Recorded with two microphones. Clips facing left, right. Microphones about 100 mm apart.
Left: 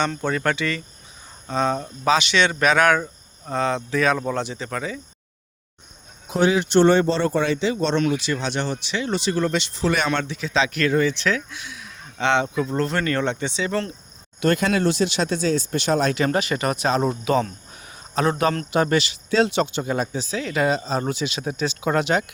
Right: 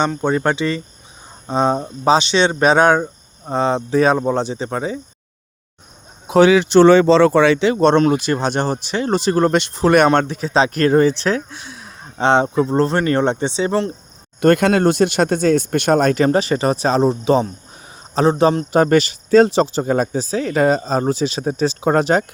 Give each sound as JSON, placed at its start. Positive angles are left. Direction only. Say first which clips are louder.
{"t": 0.2, "sound": "speech", "louder": "right 5 dB", "side_deg": -25}
{"t": 6.2, "sound": "speech", "louder": "right 8 dB", "side_deg": -85}
{"t": 14.4, "sound": "speech", "louder": "right 7 dB", "side_deg": -55}
{"t": 16.2, "sound": "speech", "louder": "right 6 dB", "side_deg": -35}